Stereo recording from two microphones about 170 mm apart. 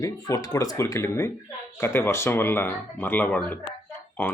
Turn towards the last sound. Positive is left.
turn(degrees=10)  # may be behind; listen again after turning